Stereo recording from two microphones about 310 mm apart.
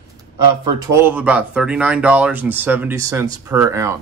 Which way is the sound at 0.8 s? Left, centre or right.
Centre.